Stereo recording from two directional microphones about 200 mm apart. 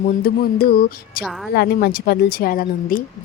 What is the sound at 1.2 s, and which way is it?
Speech, centre (ahead or behind).